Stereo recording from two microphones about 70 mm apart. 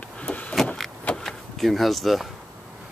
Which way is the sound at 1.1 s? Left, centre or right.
Centre.